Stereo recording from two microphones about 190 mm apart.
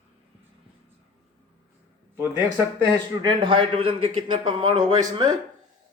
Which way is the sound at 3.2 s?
25° right (ahead or behind).